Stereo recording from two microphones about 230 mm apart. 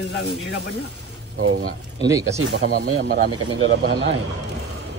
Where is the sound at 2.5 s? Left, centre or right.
Right.